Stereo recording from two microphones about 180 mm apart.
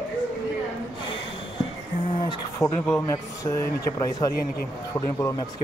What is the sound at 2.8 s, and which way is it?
Speech, 15° left (ahead or behind).